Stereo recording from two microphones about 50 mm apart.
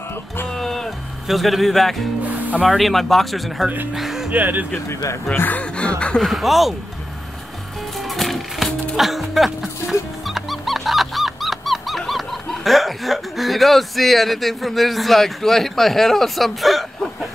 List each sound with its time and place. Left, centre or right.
0.6 s music: centre
1.2 s speech: centre
4.3 s speech: right
5.3 s speech: left
5.6 s a sound: left
6.2 s speech: centre
8.1 s music: centre